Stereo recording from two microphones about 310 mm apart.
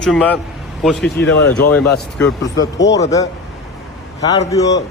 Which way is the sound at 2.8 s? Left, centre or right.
Left.